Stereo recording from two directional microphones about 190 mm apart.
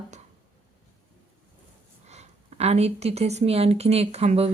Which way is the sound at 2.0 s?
35° right (ahead or behind).